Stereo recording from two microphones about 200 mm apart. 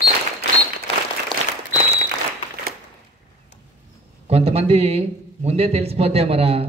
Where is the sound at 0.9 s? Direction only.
30° left (ahead or behind).